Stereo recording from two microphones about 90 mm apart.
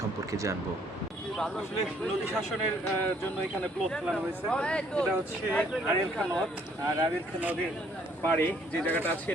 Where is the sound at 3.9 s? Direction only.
10° left (ahead or behind).